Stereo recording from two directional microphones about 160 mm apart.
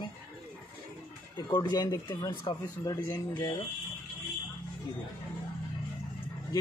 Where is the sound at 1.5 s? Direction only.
25° left (ahead or behind).